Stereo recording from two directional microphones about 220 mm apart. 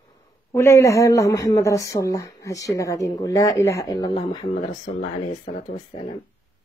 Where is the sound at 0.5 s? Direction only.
15° left (ahead or behind).